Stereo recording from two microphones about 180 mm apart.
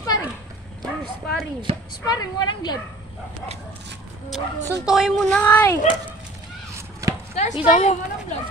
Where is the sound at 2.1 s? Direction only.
25° left (ahead or behind).